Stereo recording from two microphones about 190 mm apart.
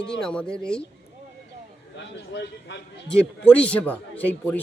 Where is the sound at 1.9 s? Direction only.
65° left (ahead or behind).